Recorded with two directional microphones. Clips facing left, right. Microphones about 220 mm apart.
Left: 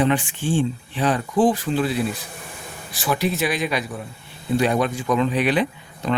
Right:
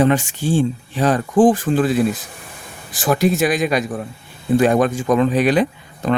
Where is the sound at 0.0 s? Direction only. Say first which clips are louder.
Right 4 dB; 45° right (ahead or behind).